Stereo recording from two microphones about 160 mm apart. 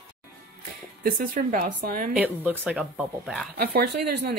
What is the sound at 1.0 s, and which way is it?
A woman's voice, 60° right (ahead or behind).